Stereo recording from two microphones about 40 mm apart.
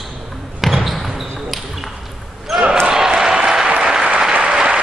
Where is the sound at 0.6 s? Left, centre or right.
Centre.